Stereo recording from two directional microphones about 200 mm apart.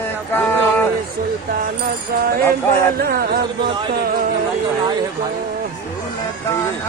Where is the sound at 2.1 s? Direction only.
50° right (ahead or behind).